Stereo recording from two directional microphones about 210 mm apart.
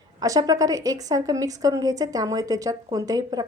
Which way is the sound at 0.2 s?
20° right (ahead or behind).